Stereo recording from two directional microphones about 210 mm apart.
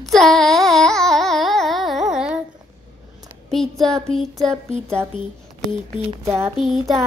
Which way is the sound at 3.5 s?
Centre (ahead or behind).